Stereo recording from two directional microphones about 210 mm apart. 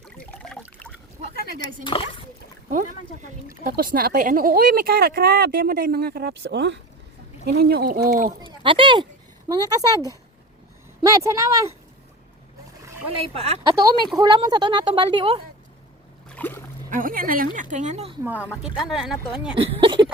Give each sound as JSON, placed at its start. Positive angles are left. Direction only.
{"t": 0.0, "sound": "water", "side_deg": 5}
{"t": 1.8, "sound": "speech", "side_deg": 25}
{"t": 2.6, "sound": "speech", "side_deg": -40}
{"t": 8.4, "sound": "a woman's voice", "side_deg": -25}
{"t": 11.0, "sound": "a woman's voice", "side_deg": -15}
{"t": 13.3, "sound": "speech", "side_deg": -30}
{"t": 16.3, "sound": "a sound", "side_deg": 10}
{"t": 16.9, "sound": "a woman's voice", "side_deg": -40}
{"t": 18.2, "sound": "a woman's voice", "side_deg": -10}
{"t": 19.5, "sound": "speech", "side_deg": -25}